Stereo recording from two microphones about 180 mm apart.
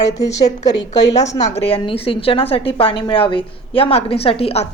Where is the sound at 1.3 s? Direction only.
40° left (ahead or behind).